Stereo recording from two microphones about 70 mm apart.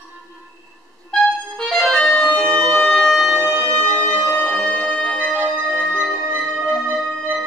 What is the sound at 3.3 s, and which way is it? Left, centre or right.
Music, right.